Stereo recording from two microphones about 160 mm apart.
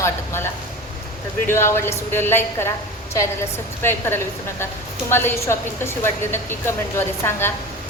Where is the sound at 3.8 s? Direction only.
15° left (ahead or behind).